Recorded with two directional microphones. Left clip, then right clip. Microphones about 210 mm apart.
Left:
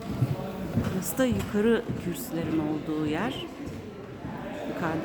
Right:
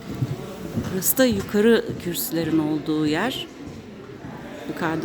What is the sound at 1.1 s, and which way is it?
A woman's voice, 30° right (ahead or behind).